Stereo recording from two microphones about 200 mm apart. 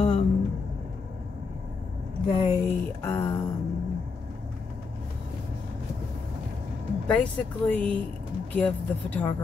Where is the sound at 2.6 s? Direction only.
10° left (ahead or behind).